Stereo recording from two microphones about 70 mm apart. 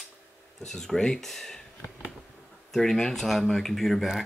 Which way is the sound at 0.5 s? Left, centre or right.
Centre.